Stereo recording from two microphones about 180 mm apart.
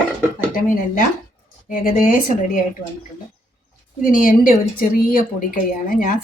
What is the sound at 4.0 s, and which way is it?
A woman's voice, 50° left (ahead or behind).